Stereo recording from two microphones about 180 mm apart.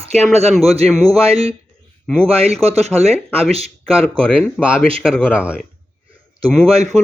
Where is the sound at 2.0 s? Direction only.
5° left (ahead or behind).